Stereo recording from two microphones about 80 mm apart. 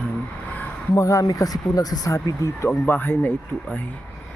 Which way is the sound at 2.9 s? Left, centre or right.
Left.